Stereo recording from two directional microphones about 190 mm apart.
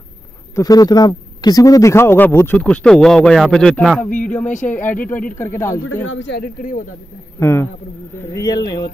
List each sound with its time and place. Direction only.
0.6 s a man's voice: 20° left (ahead or behind); by 4.0 s centre (ahead or behind)
4.5 s speech: 40° left (ahead or behind)
5.4 s speech: 15° left (ahead or behind)
6.0 s speech: 70° left (ahead or behind)
7.3 s speech: 10° left (ahead or behind)